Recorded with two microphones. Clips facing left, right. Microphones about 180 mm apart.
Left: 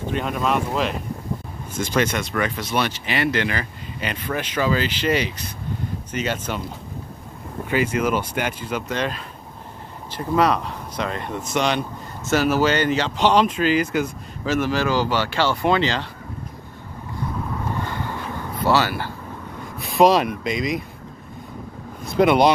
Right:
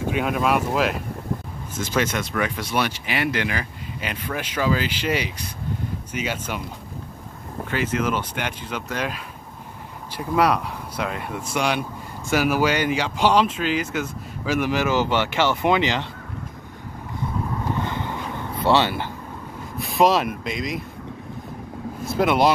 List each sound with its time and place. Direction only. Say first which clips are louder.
0.0 s speech: right 1 dB; 5° right (ahead or behind)
7.7 s speech: left 3 dB; 10° left (ahead or behind)
8.9 s speech: left 2 dB; 10° right (ahead or behind)
17.8 s a sound: even; 20° right (ahead or behind)
19.8 s speech: left 3 dB; centre (ahead or behind)
22.0 s speech: left 3 dB; centre (ahead or behind)